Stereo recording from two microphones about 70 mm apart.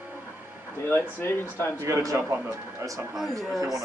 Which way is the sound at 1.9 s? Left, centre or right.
Right.